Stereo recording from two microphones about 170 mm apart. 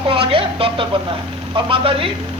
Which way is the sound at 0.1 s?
30° right (ahead or behind).